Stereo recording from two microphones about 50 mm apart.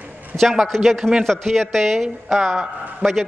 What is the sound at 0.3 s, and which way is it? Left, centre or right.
Speech, right.